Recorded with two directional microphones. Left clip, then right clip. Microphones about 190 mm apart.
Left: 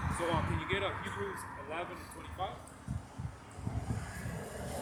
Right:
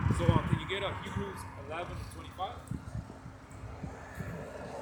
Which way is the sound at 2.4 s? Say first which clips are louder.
Right 1 dB; 10° right (ahead or behind).